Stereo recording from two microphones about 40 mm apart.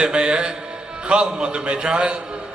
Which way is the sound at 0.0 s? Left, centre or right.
Right.